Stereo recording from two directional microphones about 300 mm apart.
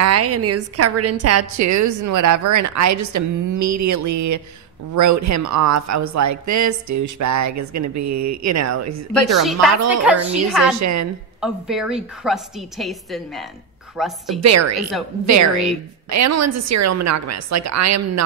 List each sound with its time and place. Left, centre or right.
0.0 s a woman's voice: right
9.4 s a woman's voice: centre
10.8 s a woman's voice: right
11.4 s a woman's voice: centre
14.4 s speech: right
14.8 s a woman's voice: centre
16.1 s speech: right